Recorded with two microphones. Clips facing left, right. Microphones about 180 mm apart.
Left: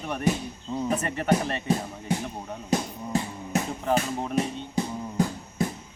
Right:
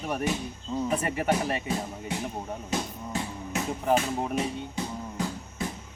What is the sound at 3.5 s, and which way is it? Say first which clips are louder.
Music: left 4 dB; 40° left (ahead or behind).